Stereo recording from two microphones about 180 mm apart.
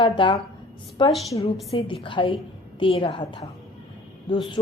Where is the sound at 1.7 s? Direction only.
30° left (ahead or behind).